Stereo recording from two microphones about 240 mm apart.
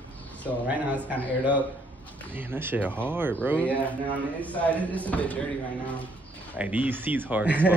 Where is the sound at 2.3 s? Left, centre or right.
Centre.